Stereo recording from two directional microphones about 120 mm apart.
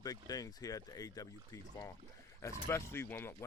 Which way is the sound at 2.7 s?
20° left (ahead or behind).